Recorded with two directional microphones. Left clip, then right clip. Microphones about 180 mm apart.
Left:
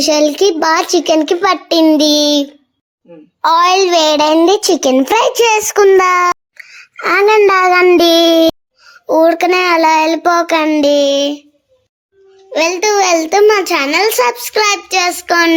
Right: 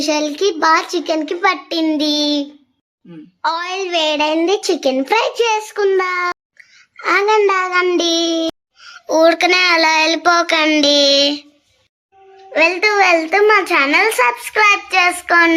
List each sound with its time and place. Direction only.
0.0 s a child's voice: 30° left (ahead or behind)
12.5 s a child's voice: 50° left (ahead or behind)
13.3 s a child's voice: 50° left (ahead or behind)
15.3 s a child's voice: 40° left (ahead or behind)